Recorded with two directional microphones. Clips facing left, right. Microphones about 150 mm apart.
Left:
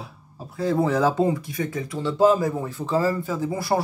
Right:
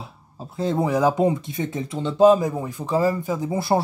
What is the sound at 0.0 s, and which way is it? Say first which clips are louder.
Speech: right 1 dB; 25° right (ahead or behind).